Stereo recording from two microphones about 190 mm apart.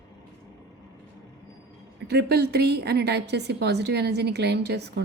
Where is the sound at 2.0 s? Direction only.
60° right (ahead or behind).